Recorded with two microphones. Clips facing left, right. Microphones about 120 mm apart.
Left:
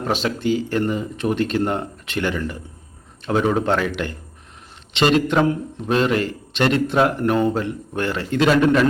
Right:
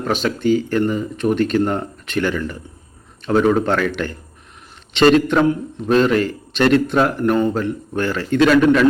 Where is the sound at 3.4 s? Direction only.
20° left (ahead or behind).